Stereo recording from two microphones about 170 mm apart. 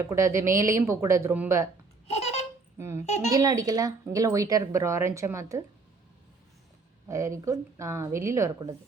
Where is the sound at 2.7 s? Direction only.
15° right (ahead or behind).